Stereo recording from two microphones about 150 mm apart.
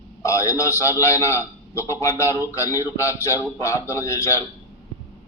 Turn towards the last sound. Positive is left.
turn(degrees=20)  # may be behind; listen again after turning